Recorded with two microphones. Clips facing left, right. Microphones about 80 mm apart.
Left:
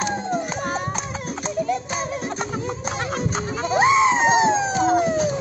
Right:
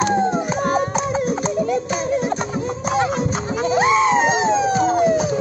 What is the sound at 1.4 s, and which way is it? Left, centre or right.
Music, centre.